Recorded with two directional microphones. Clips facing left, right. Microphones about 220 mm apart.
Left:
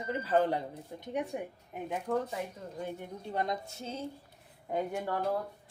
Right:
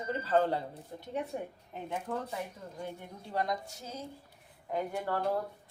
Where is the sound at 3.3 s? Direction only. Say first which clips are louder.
Right 1 dB; 25° left (ahead or behind).